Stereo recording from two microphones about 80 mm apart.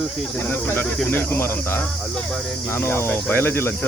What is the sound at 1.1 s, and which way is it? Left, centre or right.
Speech, left.